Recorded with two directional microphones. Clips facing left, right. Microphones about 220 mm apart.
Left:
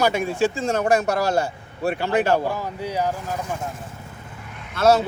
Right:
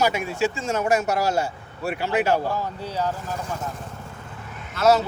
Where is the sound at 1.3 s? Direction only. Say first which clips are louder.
Left 2 dB; 55° left (ahead or behind).